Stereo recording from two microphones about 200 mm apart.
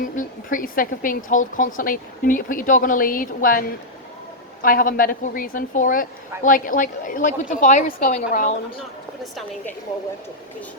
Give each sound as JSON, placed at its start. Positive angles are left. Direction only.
{"t": 0.0, "sound": "a woman's voice", "side_deg": 40}
{"t": 4.6, "sound": "a woman's voice", "side_deg": 45}
{"t": 9.2, "sound": "a woman's voice", "side_deg": 0}